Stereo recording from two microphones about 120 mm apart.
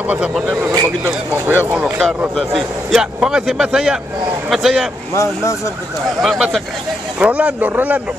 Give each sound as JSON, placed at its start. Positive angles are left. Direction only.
{"t": 0.7, "sound": "speech", "side_deg": -20}
{"t": 2.0, "sound": "a man's voice", "side_deg": 0}
{"t": 5.1, "sound": "speech", "side_deg": 25}
{"t": 6.2, "sound": "a man's voice", "side_deg": -5}